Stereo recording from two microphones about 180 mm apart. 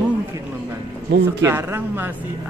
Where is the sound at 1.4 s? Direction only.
15° right (ahead or behind).